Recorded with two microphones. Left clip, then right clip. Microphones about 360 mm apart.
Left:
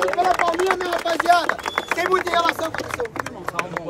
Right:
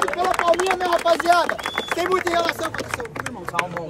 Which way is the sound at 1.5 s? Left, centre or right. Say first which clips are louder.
Left 1 dB; left.